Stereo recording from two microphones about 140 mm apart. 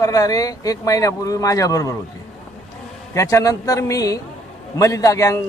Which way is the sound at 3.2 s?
20° left (ahead or behind).